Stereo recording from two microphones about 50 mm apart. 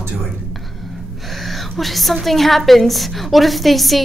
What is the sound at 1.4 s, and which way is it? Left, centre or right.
Whispering, centre.